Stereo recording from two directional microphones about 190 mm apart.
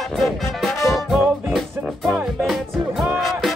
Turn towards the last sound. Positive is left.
turn(degrees=0)  # may be behind; listen again after turning